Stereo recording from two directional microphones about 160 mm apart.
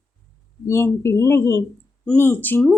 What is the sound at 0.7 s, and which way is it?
A woman's voice, 15° left (ahead or behind).